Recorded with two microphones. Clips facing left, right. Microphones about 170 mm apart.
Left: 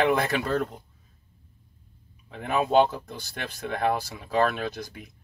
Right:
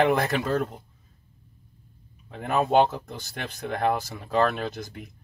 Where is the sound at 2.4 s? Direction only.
50° right (ahead or behind).